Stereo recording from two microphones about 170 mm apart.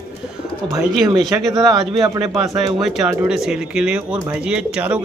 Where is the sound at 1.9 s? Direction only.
25° right (ahead or behind).